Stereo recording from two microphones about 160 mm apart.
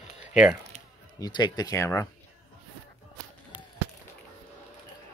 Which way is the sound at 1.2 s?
30° left (ahead or behind).